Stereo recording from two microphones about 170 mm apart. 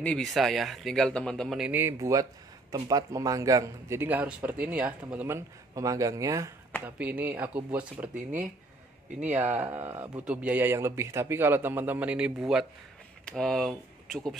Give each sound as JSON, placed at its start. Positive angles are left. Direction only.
{"t": 0.0, "sound": "a man's voice", "side_deg": 5}
{"t": 8.1, "sound": "speech", "side_deg": -50}
{"t": 9.3, "sound": "a man's voice", "side_deg": -10}